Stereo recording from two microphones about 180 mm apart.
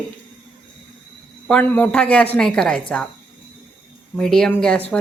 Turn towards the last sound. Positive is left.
turn(degrees=5)  # may be behind; listen again after turning